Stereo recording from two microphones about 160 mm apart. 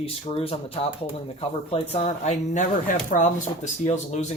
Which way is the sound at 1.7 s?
40° left (ahead or behind).